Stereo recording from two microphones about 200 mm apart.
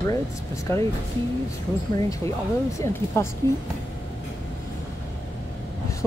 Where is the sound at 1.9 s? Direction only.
15° left (ahead or behind).